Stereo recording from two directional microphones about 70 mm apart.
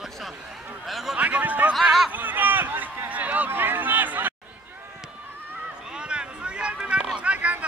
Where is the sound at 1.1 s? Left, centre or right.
Right.